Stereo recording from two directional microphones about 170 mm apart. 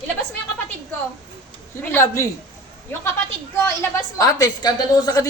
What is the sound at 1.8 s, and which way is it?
Speech, 15° left (ahead or behind).